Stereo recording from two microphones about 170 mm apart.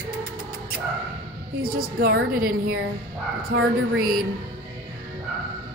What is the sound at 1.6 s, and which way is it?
A woman's voice, 60° right (ahead or behind).